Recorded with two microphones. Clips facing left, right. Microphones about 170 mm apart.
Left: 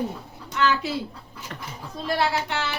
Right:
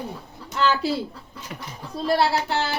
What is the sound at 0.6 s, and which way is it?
Speech, 35° right (ahead or behind).